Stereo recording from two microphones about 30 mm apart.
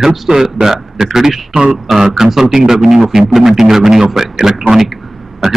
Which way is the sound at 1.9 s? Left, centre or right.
Centre.